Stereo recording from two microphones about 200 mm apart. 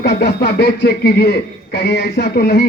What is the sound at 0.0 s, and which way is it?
A man's voice, 55° left (ahead or behind).